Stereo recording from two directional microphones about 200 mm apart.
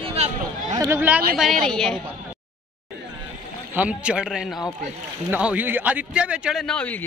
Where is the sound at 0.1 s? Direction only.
35° right (ahead or behind).